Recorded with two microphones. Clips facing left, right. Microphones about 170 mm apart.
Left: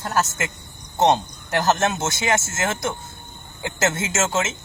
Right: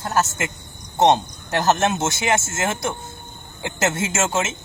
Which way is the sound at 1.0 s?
15° right (ahead or behind).